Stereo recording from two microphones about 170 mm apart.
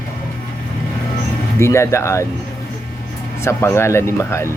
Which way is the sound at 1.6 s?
15° left (ahead or behind).